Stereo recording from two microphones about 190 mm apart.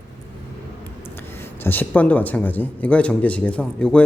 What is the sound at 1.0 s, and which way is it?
Speech, 10° left (ahead or behind).